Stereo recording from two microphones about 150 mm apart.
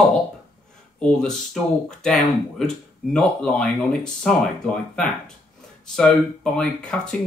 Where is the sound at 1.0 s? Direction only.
5° left (ahead or behind).